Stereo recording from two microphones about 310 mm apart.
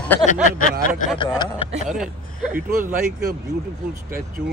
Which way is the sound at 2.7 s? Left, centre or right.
Right.